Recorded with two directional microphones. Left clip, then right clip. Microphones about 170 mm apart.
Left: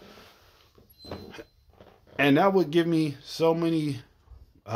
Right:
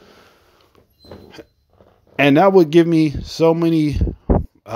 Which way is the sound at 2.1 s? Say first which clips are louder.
Right 10 dB; 40° right (ahead or behind).